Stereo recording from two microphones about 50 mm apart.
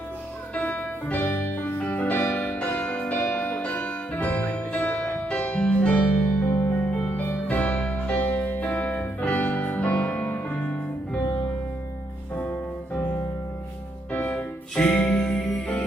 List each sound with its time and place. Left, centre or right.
0.5 s music: left
3.2 s music: left
3.5 s music: left
6.5 s music: left
6.8 s music: left
12.4 s music: left
14.1 s music: left; by 15.8 s centre